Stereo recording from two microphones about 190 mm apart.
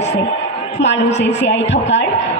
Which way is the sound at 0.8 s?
65° left (ahead or behind).